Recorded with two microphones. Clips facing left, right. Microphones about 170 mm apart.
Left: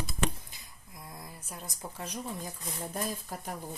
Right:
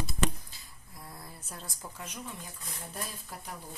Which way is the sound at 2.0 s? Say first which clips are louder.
Left 6 dB; 35° left (ahead or behind).